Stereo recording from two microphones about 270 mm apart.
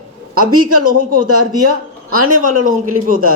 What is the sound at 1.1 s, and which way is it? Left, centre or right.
Speech, right.